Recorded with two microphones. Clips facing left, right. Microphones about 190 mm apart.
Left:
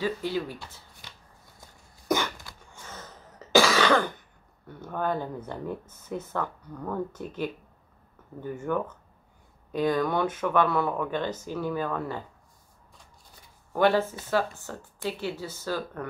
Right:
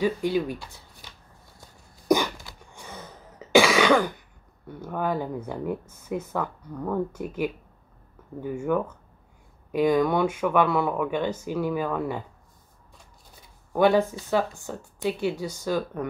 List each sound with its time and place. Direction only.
0.0 s speech: 15° right (ahead or behind)
2.0 s cough: 15° right (ahead or behind)
4.8 s speech: 5° right (ahead or behind)
13.7 s speech: 15° right (ahead or behind)